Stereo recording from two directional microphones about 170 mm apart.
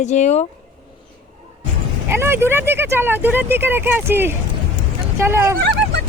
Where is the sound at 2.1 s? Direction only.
15° right (ahead or behind).